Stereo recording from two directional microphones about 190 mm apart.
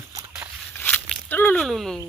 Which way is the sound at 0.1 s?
15° right (ahead or behind).